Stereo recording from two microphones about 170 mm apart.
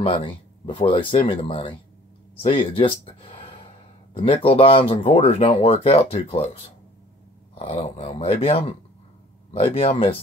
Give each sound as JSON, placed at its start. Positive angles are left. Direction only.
{"t": 0.0, "sound": "speech", "side_deg": 30}